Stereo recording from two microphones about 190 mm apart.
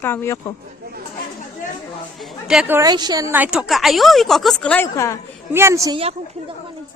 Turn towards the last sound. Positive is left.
turn(degrees=-30)  # may be behind; listen again after turning